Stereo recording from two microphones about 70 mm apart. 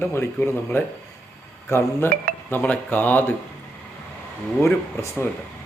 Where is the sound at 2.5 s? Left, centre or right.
Left.